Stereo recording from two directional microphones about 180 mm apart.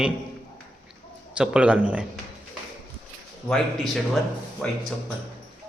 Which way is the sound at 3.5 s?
Centre (ahead or behind).